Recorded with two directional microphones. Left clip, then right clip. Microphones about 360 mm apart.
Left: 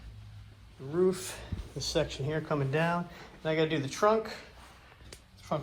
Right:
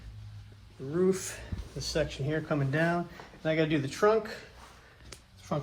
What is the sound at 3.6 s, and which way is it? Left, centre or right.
Speech, left.